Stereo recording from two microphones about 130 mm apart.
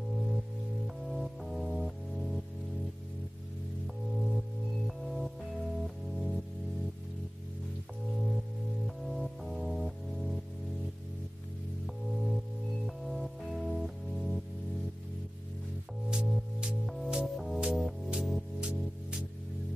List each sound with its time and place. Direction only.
0.8 s music: centre (ahead or behind)
3.8 s music: centre (ahead or behind)
8.8 s music: centre (ahead or behind)
11.8 s music: centre (ahead or behind)
16.1 s music: 5° right (ahead or behind)